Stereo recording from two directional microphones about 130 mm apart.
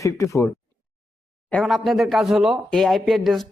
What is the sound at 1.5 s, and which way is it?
Speech, 5° left (ahead or behind).